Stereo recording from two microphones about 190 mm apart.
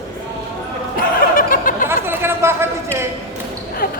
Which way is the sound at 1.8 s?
10° right (ahead or behind).